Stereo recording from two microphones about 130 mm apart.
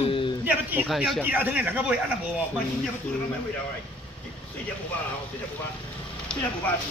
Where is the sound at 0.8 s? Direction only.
Centre (ahead or behind).